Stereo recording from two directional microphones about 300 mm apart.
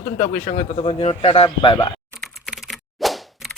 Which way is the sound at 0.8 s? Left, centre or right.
Centre.